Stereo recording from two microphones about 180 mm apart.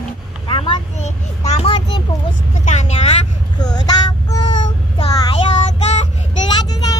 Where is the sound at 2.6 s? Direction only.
40° left (ahead or behind).